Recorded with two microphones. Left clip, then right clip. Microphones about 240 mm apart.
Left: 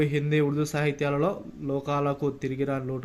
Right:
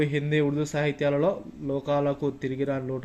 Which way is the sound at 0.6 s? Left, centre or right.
Left.